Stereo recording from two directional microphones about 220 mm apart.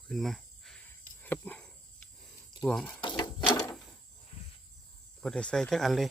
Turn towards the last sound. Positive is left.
turn(degrees=0)  # may be behind; listen again after turning